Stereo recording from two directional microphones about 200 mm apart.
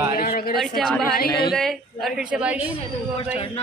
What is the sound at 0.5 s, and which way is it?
A woman's voice, centre (ahead or behind).